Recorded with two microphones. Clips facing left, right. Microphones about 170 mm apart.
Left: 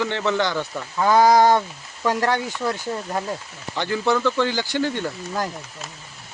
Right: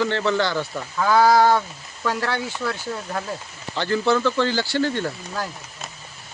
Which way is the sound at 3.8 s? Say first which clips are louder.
Right 1 dB; 15° left (ahead or behind).